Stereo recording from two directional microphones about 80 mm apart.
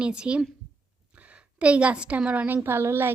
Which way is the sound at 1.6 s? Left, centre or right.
Centre.